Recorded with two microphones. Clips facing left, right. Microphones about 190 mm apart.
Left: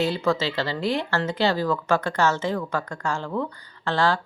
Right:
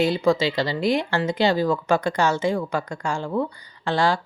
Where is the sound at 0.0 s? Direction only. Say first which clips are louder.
Right 4 dB; 15° right (ahead or behind).